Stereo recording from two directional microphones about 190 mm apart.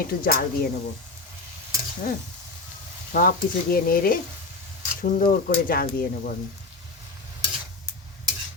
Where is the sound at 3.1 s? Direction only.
50° left (ahead or behind).